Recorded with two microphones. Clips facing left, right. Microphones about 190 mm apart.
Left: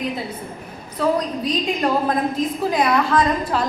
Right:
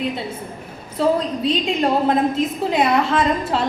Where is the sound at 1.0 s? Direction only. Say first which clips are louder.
Right 2 dB; 30° right (ahead or behind).